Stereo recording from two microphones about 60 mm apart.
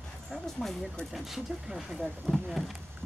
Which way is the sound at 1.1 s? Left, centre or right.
Centre.